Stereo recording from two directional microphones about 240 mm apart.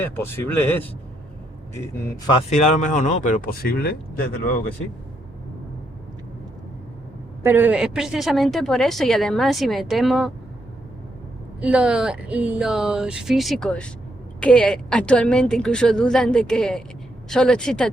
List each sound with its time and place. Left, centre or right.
0.0 s speech: centre
2.5 s speech: left
7.4 s speech: centre
11.6 s speech: centre